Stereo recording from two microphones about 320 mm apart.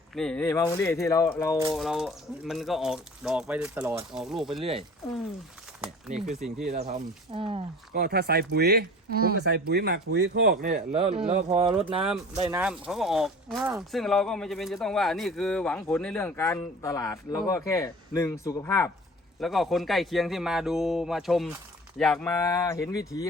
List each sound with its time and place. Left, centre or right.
0.1 s speech: centre
4.6 s speech: centre
5.8 s speech: centre
6.7 s speech: centre
7.9 s speech: right
12.0 s speech: centre